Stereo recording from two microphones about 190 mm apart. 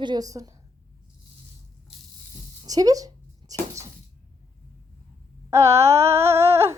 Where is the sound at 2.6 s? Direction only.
20° right (ahead or behind).